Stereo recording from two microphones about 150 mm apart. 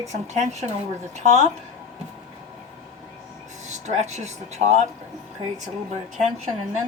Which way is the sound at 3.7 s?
50° right (ahead or behind).